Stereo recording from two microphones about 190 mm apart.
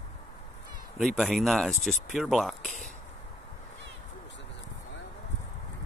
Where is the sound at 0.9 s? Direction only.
Centre (ahead or behind).